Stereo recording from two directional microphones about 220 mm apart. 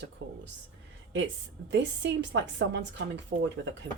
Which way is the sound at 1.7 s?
55° right (ahead or behind).